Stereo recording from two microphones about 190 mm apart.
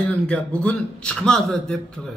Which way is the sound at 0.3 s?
5° left (ahead or behind).